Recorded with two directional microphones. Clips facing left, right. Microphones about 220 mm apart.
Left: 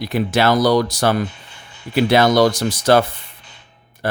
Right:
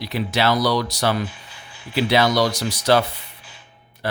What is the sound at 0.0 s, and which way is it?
Speech, 50° left (ahead or behind).